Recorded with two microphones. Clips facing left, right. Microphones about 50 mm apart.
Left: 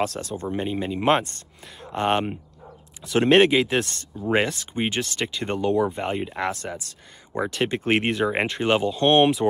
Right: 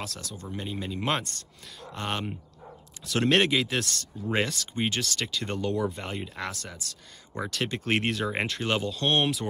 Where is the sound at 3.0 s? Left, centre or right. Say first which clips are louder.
Left 7 dB; centre.